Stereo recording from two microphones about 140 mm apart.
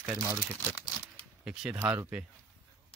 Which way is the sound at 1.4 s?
5° right (ahead or behind).